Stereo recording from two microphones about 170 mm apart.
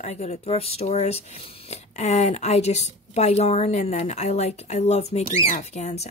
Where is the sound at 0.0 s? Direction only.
40° left (ahead or behind).